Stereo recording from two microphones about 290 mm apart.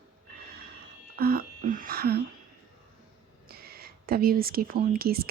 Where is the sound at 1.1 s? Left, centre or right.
Right.